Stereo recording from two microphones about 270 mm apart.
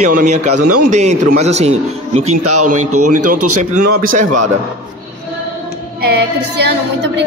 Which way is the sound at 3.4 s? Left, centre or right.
Right.